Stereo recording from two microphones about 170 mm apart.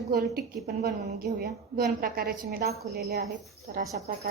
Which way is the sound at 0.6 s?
70° right (ahead or behind).